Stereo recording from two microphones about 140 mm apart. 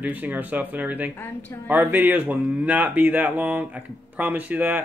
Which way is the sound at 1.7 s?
15° right (ahead or behind).